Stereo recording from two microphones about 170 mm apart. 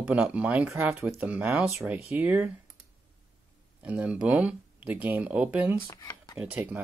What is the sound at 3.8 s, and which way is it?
Speech, 10° right (ahead or behind).